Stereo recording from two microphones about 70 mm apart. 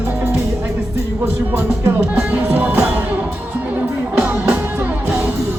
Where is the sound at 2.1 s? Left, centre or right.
Right.